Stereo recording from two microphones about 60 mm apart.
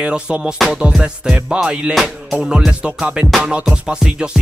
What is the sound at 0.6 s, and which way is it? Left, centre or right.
Music, centre.